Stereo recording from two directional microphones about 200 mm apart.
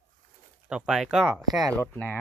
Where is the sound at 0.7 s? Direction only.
5° right (ahead or behind).